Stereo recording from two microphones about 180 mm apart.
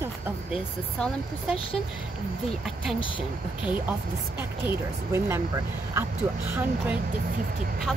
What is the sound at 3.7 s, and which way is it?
Speech, 10° right (ahead or behind).